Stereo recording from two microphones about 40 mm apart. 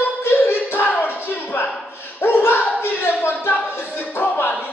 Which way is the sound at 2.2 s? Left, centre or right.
Left.